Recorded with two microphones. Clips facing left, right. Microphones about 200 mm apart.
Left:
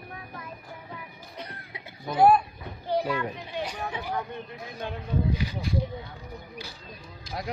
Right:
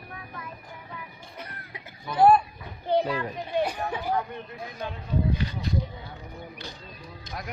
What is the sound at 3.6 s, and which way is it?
Chatter, 50° right (ahead or behind).